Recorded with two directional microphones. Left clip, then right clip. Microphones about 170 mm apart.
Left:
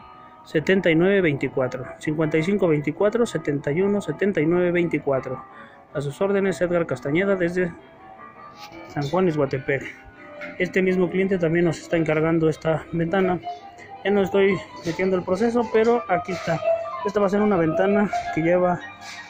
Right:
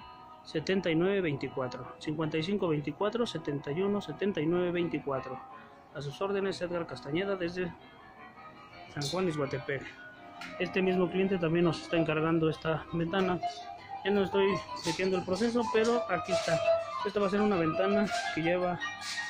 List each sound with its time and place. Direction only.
0.5 s speech: 20° left (ahead or behind)
8.9 s speech: 15° left (ahead or behind)